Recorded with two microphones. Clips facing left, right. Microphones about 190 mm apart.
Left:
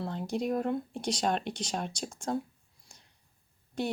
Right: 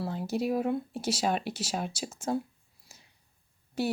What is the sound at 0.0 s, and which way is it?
Speech, 5° right (ahead or behind).